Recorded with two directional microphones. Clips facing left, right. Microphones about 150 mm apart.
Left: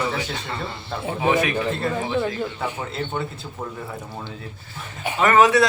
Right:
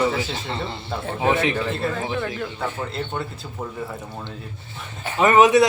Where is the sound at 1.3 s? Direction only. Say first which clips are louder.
Even; 25° right (ahead or behind).